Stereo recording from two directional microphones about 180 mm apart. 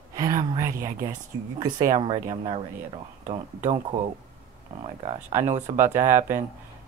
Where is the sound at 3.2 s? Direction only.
40° right (ahead or behind).